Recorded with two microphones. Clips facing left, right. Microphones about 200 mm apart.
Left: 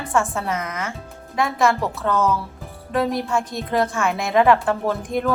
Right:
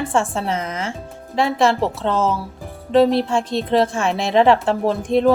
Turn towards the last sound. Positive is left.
turn(degrees=-30)  # may be behind; listen again after turning